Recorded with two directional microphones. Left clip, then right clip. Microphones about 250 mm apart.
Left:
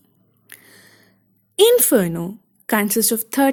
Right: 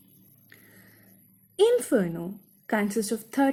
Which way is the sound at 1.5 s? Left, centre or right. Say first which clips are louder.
Left 8 dB; left.